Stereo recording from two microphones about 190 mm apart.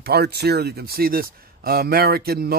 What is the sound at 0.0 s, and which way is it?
Speech, 55° right (ahead or behind).